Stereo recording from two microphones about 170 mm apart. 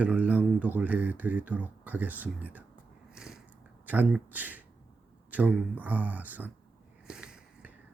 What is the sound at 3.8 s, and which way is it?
Speech, 10° right (ahead or behind).